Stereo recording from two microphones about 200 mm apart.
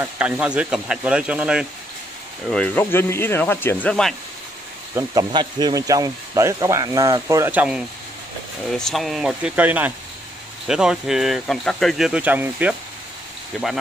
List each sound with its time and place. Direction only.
0.0 s speech: 5° right (ahead or behind)
2.5 s speech: 10° left (ahead or behind)
4.9 s speech: 20° right (ahead or behind)